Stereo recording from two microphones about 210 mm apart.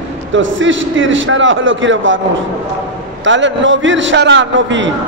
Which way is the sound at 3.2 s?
60° right (ahead or behind).